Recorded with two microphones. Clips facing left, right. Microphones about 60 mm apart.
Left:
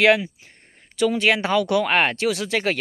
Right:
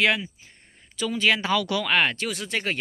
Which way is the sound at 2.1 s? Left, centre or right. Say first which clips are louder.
Left 6 dB; left.